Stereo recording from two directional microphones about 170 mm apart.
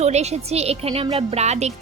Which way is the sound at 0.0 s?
40° right (ahead or behind).